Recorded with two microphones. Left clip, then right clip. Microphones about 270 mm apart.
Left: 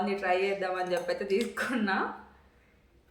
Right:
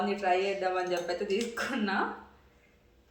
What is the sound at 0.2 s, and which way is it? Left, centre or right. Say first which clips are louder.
Speech: even; centre.